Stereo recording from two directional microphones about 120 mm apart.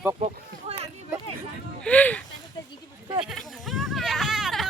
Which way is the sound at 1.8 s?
10° left (ahead or behind).